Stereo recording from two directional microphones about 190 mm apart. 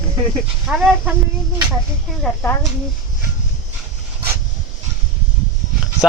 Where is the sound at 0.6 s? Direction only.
Centre (ahead or behind).